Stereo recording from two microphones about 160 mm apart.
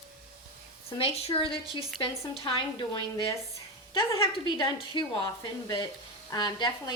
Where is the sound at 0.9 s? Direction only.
40° left (ahead or behind).